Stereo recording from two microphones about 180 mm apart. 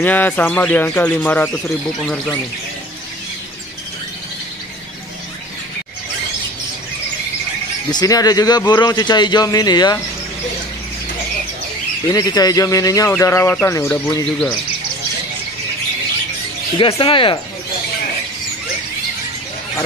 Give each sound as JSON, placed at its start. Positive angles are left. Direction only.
{"t": 0.0, "sound": "speech", "side_deg": 10}
{"t": 7.9, "sound": "a man's voice", "side_deg": 20}
{"t": 12.1, "sound": "a man's voice", "side_deg": 20}
{"t": 16.7, "sound": "a man's voice", "side_deg": 30}